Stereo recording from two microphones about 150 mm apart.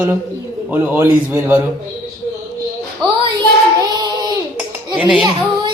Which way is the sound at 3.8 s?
30° right (ahead or behind).